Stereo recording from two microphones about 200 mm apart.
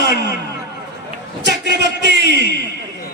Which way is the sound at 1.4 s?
60° right (ahead or behind).